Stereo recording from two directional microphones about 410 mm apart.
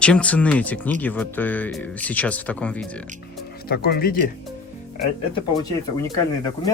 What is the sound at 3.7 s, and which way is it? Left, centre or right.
Speech, left.